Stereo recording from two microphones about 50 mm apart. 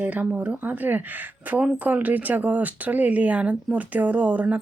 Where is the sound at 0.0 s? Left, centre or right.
Right.